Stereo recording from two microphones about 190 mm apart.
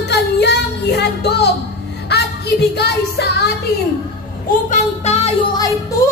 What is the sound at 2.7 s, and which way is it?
Music, 60° left (ahead or behind).